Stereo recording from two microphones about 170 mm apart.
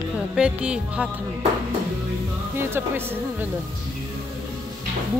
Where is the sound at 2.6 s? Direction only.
15° right (ahead or behind).